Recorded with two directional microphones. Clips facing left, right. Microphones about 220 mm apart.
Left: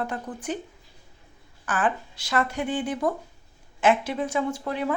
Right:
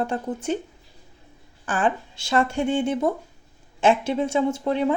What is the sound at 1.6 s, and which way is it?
Speech, 25° right (ahead or behind).